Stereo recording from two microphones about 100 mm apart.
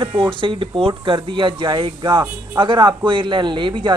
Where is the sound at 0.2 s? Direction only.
55° right (ahead or behind).